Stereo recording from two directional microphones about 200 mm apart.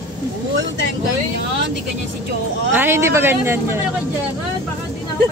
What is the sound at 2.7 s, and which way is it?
Child singing, 10° right (ahead or behind).